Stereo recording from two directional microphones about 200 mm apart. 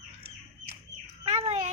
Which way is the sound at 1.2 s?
30° right (ahead or behind).